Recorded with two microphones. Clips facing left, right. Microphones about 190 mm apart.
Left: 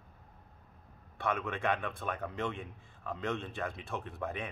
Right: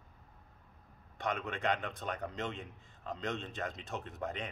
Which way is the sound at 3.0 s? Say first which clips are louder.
Left 2 dB; 20° right (ahead or behind).